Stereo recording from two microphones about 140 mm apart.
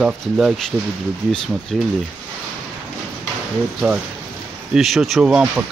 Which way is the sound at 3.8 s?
10° right (ahead or behind).